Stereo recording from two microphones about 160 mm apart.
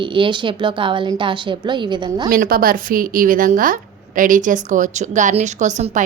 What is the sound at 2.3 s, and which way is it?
A woman's voice, 65° right (ahead or behind).